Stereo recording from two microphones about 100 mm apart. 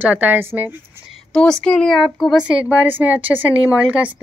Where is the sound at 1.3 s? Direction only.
5° left (ahead or behind).